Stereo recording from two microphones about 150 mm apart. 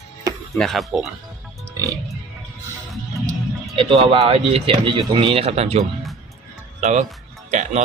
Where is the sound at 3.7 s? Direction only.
40° right (ahead or behind).